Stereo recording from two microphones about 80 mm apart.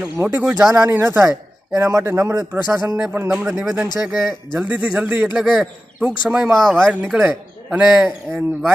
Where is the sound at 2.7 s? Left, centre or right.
Right.